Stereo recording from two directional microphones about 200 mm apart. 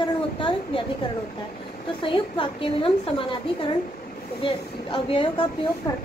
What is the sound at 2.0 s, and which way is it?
Speech, 25° left (ahead or behind).